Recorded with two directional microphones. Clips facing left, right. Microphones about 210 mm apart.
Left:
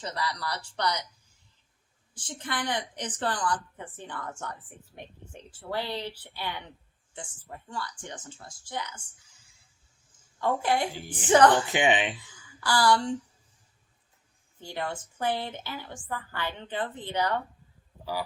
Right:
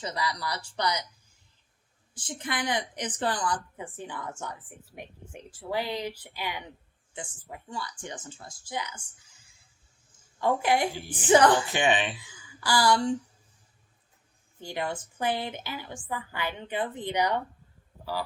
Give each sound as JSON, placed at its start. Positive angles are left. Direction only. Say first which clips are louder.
{"t": 0.0, "sound": "a woman's voice", "louder": "right 1 dB", "side_deg": -10}
{"t": 2.1, "sound": "a woman's voice", "louder": "right 1 dB", "side_deg": -10}
{"t": 10.4, "sound": "a woman's voice", "louder": "right 2 dB", "side_deg": -10}
{"t": 11.7, "sound": "speech", "louder": "left 1 dB", "side_deg": 15}
{"t": 12.5, "sound": "a woman's voice", "louder": "even", "side_deg": -10}
{"t": 14.6, "sound": "a woman's voice", "louder": "right 2 dB", "side_deg": -15}